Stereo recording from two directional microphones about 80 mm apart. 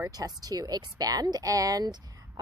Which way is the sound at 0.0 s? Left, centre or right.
Right.